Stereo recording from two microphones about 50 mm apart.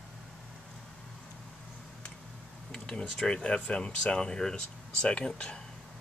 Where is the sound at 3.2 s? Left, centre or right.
Centre.